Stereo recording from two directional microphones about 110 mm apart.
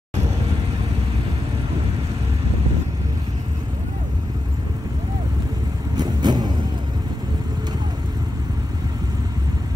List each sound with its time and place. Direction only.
5.9 s vehicle: 40° right (ahead or behind)